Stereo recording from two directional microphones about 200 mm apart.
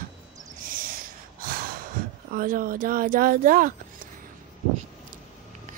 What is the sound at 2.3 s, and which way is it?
Speech, 45° right (ahead or behind).